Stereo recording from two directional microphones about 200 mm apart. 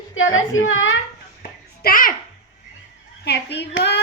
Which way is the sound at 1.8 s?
45° left (ahead or behind).